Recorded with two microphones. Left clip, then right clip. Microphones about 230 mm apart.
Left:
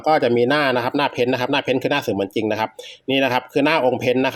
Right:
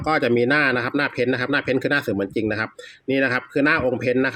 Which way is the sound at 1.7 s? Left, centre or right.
Right.